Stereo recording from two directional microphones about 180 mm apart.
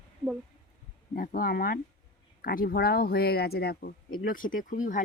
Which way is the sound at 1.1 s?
50° left (ahead or behind).